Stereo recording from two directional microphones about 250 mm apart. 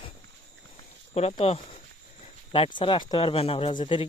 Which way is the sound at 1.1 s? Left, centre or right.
Left.